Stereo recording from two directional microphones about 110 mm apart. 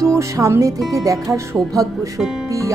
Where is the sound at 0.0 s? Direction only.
25° right (ahead or behind).